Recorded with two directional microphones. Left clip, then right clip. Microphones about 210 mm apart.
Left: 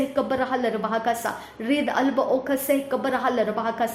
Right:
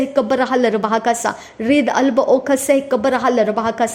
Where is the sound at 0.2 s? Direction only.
40° right (ahead or behind).